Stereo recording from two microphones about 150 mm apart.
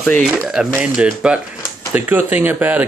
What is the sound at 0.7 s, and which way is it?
Speech, 5° right (ahead or behind).